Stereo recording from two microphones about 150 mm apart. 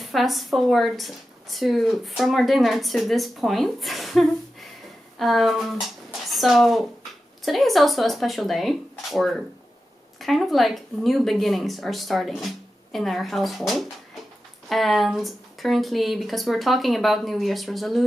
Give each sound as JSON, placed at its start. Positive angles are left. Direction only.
{"t": 0.0, "sound": "a woman's voice", "side_deg": 0}